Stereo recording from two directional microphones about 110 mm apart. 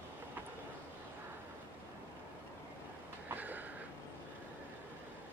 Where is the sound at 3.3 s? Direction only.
15° right (ahead or behind).